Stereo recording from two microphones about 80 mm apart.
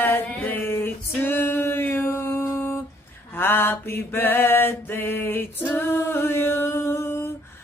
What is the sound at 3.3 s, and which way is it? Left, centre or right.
A woman's voice, left.